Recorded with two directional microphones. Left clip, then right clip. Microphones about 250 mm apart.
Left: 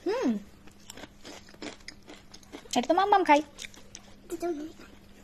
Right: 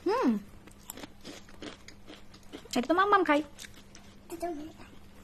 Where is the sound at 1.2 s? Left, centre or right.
Centre.